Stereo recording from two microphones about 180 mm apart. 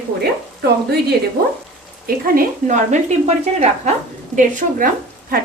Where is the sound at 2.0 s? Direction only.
50° right (ahead or behind).